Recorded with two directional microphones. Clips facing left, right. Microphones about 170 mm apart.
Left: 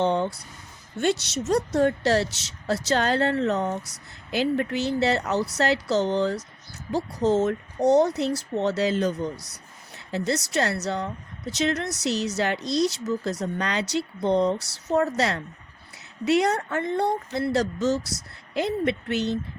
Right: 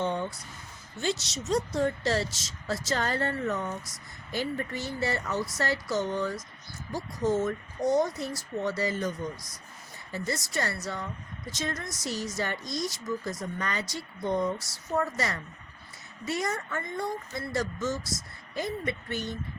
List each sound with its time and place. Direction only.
0.0 s speech: 75° left (ahead or behind)
1.0 s speech: 65° left (ahead or behind)